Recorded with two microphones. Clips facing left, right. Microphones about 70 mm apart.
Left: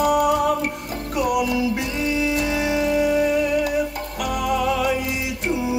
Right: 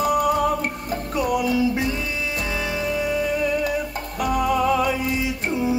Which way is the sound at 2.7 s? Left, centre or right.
Left.